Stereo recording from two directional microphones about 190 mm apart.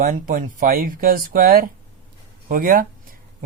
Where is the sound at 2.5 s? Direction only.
45° right (ahead or behind).